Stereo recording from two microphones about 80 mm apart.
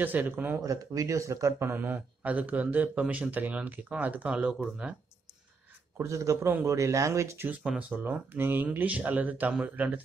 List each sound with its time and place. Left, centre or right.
0.0 s a man's voice: right
0.6 s a man's voice: right; by 4.9 s centre
5.9 s speech: right
8.0 s a man's voice: right